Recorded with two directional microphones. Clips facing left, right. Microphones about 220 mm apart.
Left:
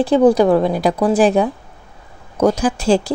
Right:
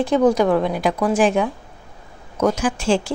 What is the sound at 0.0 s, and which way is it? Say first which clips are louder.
A woman's voice: left 4 dB; 30° left (ahead or behind).